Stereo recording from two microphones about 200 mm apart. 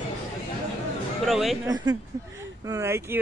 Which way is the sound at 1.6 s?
20° right (ahead or behind).